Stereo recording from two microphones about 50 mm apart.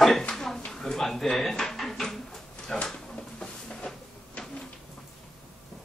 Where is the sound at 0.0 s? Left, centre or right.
Centre.